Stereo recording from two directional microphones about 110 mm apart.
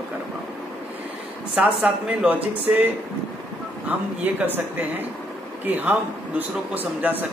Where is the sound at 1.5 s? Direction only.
15° right (ahead or behind).